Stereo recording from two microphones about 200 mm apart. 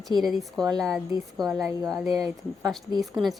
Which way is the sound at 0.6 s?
20° right (ahead or behind).